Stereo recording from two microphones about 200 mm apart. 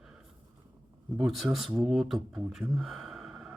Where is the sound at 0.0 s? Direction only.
5° right (ahead or behind).